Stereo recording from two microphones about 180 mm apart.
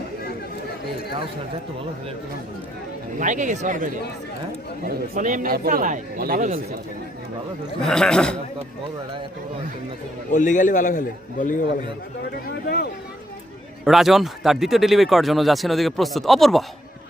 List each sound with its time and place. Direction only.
3.2 s speech: 45° right (ahead or behind)
5.1 s speech: 50° right (ahead or behind)
7.8 s speech: 5° left (ahead or behind)
10.3 s a man's voice: 45° left (ahead or behind)
12.5 s speech: 60° left (ahead or behind)
13.8 s speech: centre (ahead or behind)